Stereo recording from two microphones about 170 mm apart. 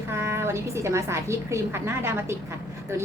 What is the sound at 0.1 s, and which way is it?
A woman's voice, 15° right (ahead or behind).